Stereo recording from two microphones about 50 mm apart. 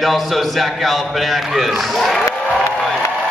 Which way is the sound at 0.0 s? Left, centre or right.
Centre.